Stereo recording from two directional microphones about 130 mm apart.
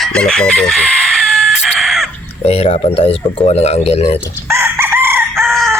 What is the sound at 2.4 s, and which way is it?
Speech, 50° left (ahead or behind).